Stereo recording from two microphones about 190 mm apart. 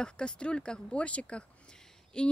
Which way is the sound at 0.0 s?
5° left (ahead or behind).